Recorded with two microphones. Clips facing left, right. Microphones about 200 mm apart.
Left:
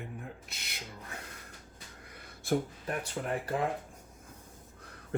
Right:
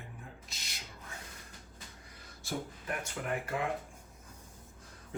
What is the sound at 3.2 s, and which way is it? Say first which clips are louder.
Speech: left 3 dB; 25° left (ahead or behind).